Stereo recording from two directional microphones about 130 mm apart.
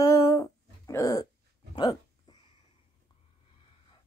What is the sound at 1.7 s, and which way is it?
Speech, 35° left (ahead or behind).